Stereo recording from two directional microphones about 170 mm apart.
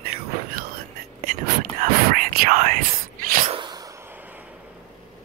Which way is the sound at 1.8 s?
55° right (ahead or behind).